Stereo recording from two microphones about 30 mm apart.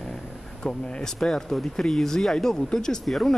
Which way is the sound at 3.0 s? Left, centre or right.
Centre.